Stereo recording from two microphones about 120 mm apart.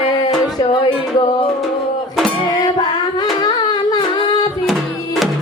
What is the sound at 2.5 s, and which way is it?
Music, 35° left (ahead or behind).